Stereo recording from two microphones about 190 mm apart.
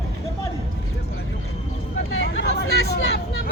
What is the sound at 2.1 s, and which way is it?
Vehicle, 85° left.